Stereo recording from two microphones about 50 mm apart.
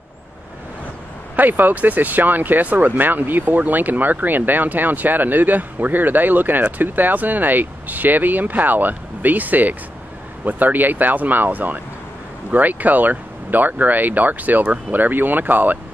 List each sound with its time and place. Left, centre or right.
1.3 s speech: right